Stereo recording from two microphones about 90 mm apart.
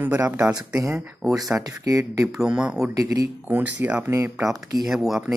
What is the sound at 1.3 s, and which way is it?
Speech, 45° right (ahead or behind).